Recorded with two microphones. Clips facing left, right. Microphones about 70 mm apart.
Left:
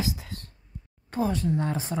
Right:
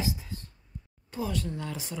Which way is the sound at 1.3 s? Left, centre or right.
Left.